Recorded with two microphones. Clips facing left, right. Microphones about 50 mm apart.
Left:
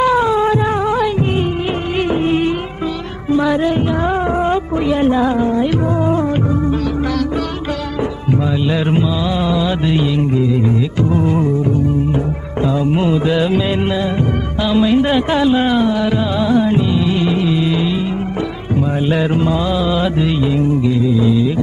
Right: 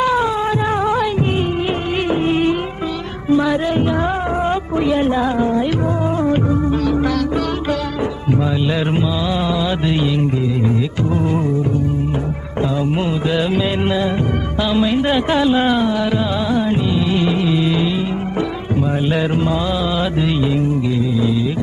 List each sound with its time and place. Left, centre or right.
0.0 s cat: left
2.0 s music: centre
3.3 s music: centre
4.8 s a woman's voice: centre
6.1 s music: centre
6.8 s music: centre
9.5 s music: centre
11.1 s music: centre
13.0 s music: centre
14.7 s a sound: centre
15.4 s a sound: centre
15.9 s music: centre
17.2 s music: centre
19.1 s mantra: centre